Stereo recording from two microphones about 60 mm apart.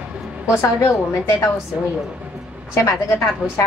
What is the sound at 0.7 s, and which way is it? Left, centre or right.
Speech, left.